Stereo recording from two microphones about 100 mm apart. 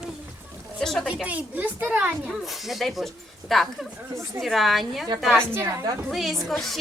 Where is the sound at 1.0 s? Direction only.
10° right (ahead or behind).